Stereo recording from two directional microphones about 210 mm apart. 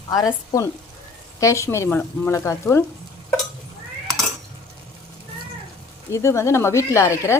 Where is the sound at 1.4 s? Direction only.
15° left (ahead or behind).